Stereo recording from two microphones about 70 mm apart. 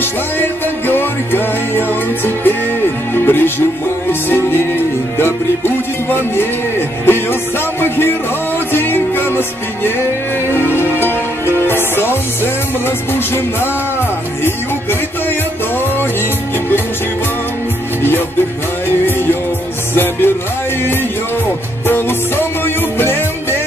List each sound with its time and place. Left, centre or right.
0.0 s music: left
8.7 s music: left
10.8 s music: left
21.8 s music: left